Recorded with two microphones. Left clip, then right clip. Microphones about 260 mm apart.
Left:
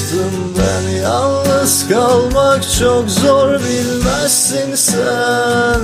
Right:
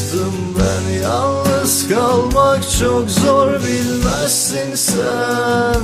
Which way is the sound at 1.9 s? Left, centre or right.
Centre.